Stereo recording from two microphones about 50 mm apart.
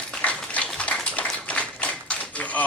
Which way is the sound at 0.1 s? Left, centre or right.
Left.